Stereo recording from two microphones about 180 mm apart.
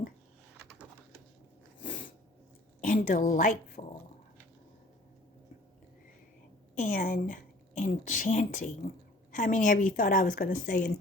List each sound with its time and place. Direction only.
0.5 s bird: 5° right (ahead or behind)
2.8 s speech: 50° left (ahead or behind)
6.7 s a woman's voice: 45° left (ahead or behind)